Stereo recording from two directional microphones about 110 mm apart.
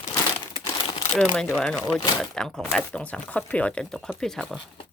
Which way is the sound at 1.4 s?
15° left (ahead or behind).